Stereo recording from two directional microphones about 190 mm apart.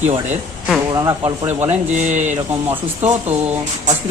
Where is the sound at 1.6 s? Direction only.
40° right (ahead or behind).